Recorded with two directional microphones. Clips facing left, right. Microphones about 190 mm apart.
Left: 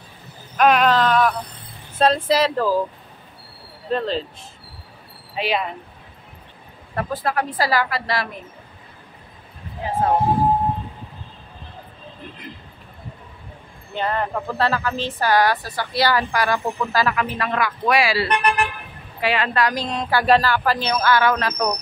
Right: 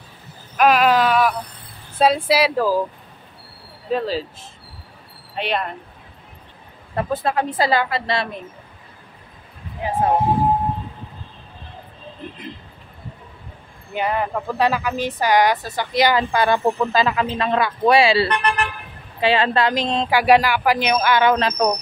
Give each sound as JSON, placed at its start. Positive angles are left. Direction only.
{"t": 0.6, "sound": "a sound", "side_deg": -5}
{"t": 2.0, "sound": "speech", "side_deg": -10}
{"t": 3.9, "sound": "speech", "side_deg": -5}
{"t": 7.0, "sound": "speech", "side_deg": -25}
{"t": 13.9, "sound": "speech", "side_deg": -10}
{"t": 18.3, "sound": "speech", "side_deg": 10}
{"t": 19.1, "sound": "speech", "side_deg": -30}
{"t": 20.1, "sound": "speech", "side_deg": -15}